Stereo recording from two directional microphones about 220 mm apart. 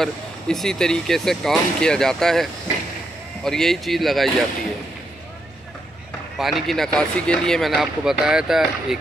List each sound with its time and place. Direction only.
0.0 s speech: centre (ahead or behind)
6.3 s speech: centre (ahead or behind)